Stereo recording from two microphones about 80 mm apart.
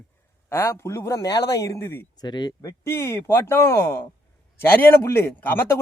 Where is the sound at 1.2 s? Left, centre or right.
Left.